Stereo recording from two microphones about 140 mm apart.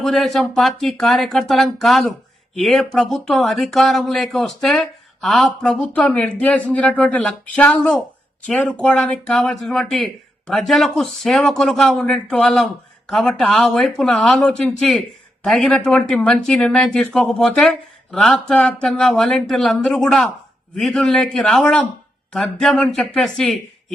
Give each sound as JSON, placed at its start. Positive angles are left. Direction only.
{"t": 0.0, "sound": "speech", "side_deg": 0}